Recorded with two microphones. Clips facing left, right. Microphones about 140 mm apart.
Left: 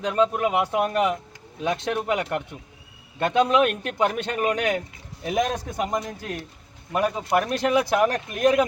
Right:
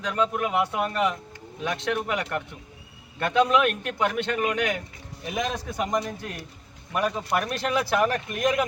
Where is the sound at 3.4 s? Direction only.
30° left (ahead or behind).